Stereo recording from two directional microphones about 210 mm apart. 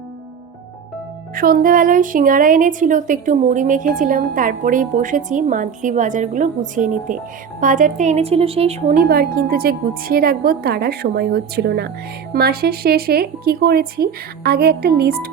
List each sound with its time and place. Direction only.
1.4 s a woman's voice: 40° right (ahead or behind)